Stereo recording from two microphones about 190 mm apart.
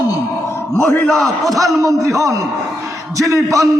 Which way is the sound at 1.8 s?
15° right (ahead or behind).